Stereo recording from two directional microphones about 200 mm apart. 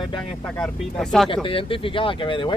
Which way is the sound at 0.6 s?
Centre (ahead or behind).